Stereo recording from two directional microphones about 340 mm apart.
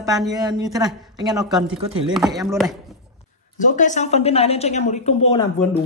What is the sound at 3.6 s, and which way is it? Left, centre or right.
A woman's voice, left.